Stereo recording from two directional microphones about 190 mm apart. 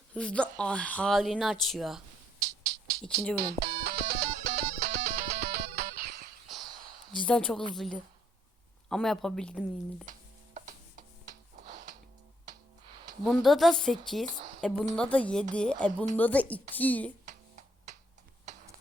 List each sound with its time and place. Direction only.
0.1 s speech: 5° left (ahead or behind)
3.3 s music: 55° right (ahead or behind)
7.3 s speech: 5° left (ahead or behind)
10.1 s music: 40° right (ahead or behind)
13.2 s speech: centre (ahead or behind)